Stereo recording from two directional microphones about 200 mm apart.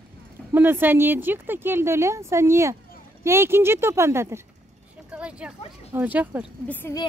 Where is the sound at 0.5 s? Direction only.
10° right (ahead or behind).